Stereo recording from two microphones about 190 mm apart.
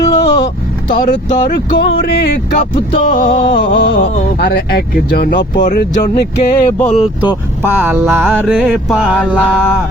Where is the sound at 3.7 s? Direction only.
65° left (ahead or behind).